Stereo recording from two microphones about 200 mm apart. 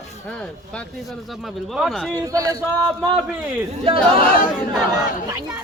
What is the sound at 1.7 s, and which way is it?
Speech, centre (ahead or behind).